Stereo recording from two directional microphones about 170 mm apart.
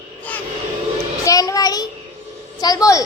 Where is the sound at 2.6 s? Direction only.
20° left (ahead or behind).